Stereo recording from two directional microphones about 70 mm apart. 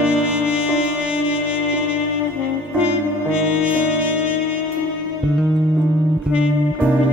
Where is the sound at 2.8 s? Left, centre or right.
Centre.